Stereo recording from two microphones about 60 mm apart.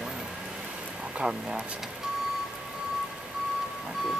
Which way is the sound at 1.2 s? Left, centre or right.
Right.